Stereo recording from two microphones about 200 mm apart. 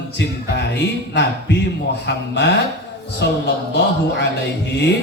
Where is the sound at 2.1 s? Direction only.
60° left (ahead or behind).